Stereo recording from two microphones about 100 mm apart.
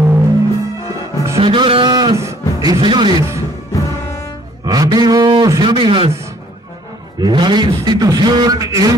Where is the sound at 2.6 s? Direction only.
45° right (ahead or behind).